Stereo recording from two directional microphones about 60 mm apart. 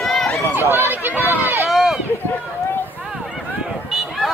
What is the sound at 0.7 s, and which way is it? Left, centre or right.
Run, right.